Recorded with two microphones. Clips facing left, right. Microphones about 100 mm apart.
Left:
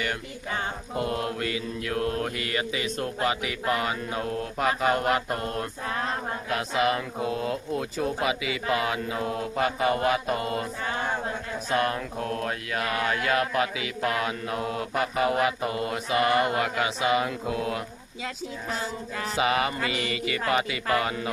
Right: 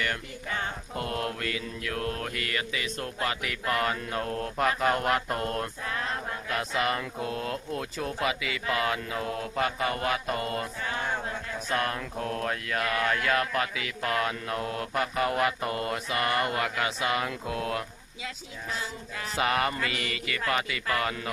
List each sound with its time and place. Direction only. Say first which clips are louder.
0.0 s mantra: left 1 dB; 15° left (ahead or behind)
5.8 s mantra: left 3 dB; 30° left (ahead or behind)
6.5 s mantra: left 3 dB; 10° left (ahead or behind)
10.8 s chant: left 3 dB; 30° left (ahead or behind)
11.7 s mantra: left 4 dB; 5° left (ahead or behind)
18.7 s a sound: left 3 dB; 40° left (ahead or behind)
19.4 s mantra: left 2 dB; 5° left (ahead or behind)
19.8 s mantra: left 4 dB; 25° left (ahead or behind)